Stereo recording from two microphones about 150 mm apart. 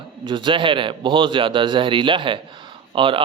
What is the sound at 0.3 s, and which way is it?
Speech, 35° right (ahead or behind).